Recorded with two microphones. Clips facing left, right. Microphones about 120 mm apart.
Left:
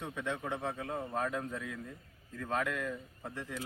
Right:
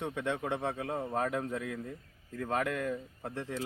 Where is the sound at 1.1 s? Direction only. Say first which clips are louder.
Right 3 dB; 60° right (ahead or behind).